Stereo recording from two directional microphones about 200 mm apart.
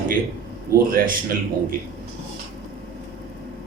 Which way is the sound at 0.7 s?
45° right (ahead or behind).